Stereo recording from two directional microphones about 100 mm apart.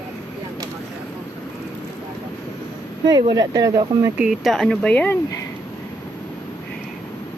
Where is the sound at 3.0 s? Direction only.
45° right (ahead or behind).